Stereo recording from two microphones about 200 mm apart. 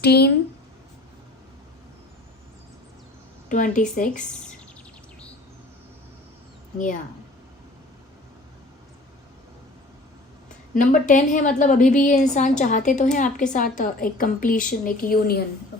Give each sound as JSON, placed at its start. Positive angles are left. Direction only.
{"t": 0.0, "sound": "a woman's voice", "side_deg": 55}
{"t": 3.5, "sound": "a woman's voice", "side_deg": 40}
{"t": 6.7, "sound": "a woman's voice", "side_deg": 40}
{"t": 10.8, "sound": "a woman's voice", "side_deg": 40}